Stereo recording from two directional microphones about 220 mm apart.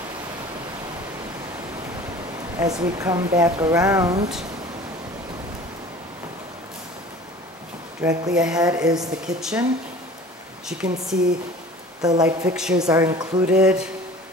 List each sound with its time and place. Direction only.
2.6 s speech: 15° right (ahead or behind)
8.0 s speech: 15° right (ahead or behind)
8.3 s speech: 5° right (ahead or behind)
10.7 s speech: 5° right (ahead or behind)
12.2 s speech: 5° right (ahead or behind)
12.8 s speech: 15° right (ahead or behind)
13.5 s speech: 5° right (ahead or behind)